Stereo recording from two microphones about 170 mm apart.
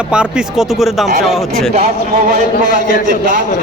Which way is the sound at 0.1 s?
5° right (ahead or behind).